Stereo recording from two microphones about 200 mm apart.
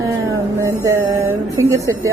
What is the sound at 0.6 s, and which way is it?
Speech, 15° right (ahead or behind).